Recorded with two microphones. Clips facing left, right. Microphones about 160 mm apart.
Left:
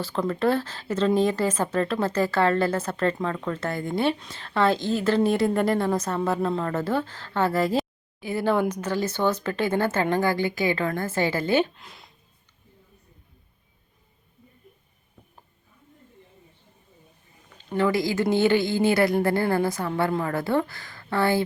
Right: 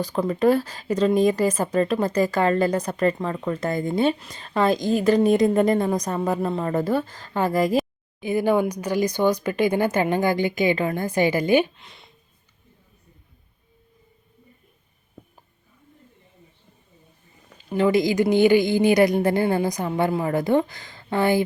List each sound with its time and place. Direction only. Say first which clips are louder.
0.0 s a woman's voice: right 4 dB; 15° right (ahead or behind)
11.7 s speech: left 1 dB; centre (ahead or behind)
17.7 s a woman's voice: right 4 dB; 20° right (ahead or behind)